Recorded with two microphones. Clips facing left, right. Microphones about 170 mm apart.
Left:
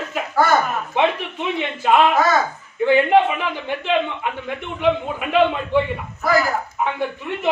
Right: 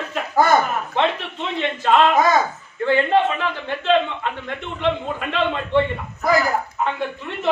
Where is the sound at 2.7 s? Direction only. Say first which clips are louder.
Left 3 dB; 15° left (ahead or behind).